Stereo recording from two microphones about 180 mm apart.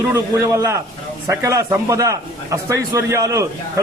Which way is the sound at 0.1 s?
15° right (ahead or behind).